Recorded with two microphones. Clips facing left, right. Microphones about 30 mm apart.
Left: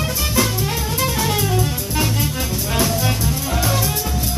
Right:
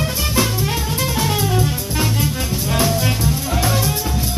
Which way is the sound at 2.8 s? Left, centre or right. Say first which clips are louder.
Right 1 dB; centre.